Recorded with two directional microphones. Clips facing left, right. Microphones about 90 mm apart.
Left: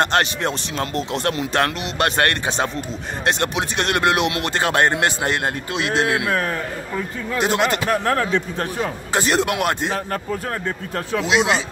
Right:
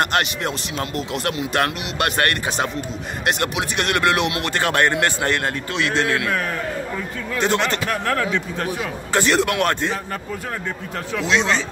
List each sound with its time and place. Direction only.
0.0 s a man's voice: 30° left (ahead or behind)
7.3 s speech: 15° left (ahead or behind)
7.8 s speech: 30° left (ahead or behind)
9.1 s a man's voice: 20° left (ahead or behind)
11.1 s speech: 15° left (ahead or behind)